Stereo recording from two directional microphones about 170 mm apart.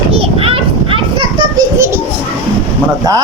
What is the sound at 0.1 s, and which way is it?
Children playing, 35° right (ahead or behind).